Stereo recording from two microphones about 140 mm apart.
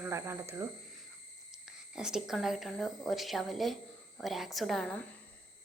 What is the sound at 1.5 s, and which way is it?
A woman's voice, 5° right (ahead or behind).